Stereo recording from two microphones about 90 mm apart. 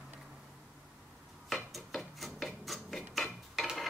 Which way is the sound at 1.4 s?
Centre (ahead or behind).